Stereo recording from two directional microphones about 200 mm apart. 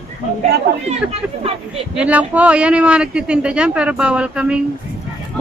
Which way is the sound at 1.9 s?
5° right (ahead or behind).